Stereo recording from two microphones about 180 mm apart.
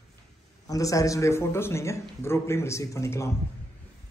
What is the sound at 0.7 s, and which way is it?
Speech, 20° left (ahead or behind).